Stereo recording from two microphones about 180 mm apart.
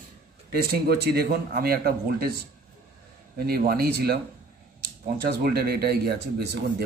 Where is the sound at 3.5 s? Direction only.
60° right (ahead or behind).